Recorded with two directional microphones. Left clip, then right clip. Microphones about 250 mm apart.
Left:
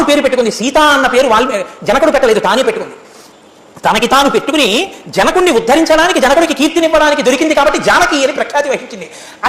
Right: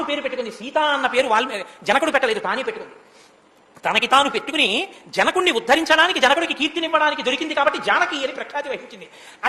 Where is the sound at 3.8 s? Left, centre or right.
Centre.